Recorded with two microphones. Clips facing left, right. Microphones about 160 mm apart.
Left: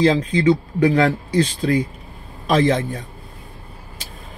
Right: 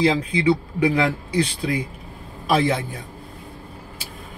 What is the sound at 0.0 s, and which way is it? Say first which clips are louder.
Speech: left 3 dB; 10° right (ahead or behind).